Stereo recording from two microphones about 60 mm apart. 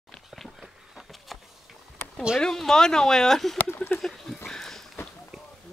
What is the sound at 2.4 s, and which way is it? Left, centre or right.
Speech, centre.